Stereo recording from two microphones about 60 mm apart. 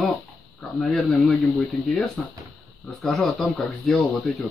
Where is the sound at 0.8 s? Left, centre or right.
Left.